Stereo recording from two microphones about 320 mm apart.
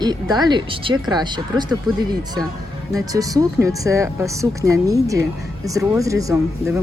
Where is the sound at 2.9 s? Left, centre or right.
Centre.